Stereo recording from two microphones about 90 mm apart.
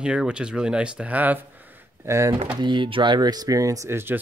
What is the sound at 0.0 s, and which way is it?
Speech, 10° right (ahead or behind).